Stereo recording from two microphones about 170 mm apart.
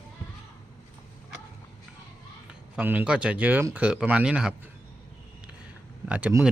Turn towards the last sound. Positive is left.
turn(degrees=-5)  # may be behind; listen again after turning